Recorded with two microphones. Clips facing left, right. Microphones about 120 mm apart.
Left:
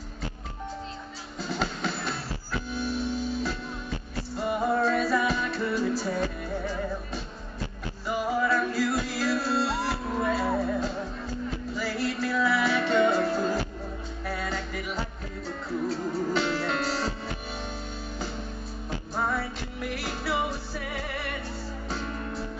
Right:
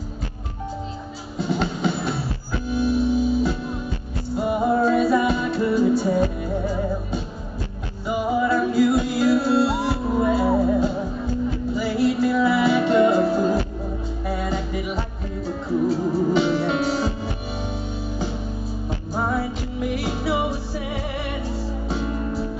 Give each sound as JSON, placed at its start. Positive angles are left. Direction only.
{"t": 1.4, "sound": "music", "side_deg": 0}
{"t": 8.1, "sound": "music", "side_deg": 0}
{"t": 16.3, "sound": "music", "side_deg": -5}
{"t": 19.2, "sound": "music", "side_deg": -20}
{"t": 19.8, "sound": "music", "side_deg": 0}